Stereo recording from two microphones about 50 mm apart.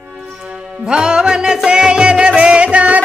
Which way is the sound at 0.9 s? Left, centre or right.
Centre.